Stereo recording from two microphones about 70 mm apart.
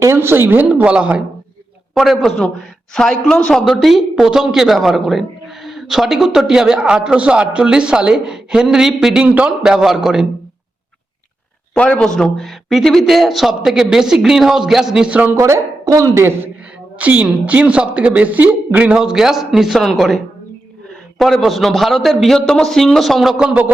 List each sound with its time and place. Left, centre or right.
0.0 s speech: right
0.9 s a woman's voice: centre
2.0 s a man's voice: centre
9.2 s a man's voice: centre
9.6 s a man's voice: centre
11.7 s a man's voice: centre
15.1 s a man's voice: right
15.4 s a woman's voice: right
17.0 s a man's voice: right
18.9 s a man's voice: centre
21.2 s a man's voice: centre
23.5 s a man's voice: right